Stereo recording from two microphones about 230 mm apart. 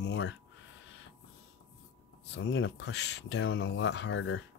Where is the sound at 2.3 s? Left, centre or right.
Left.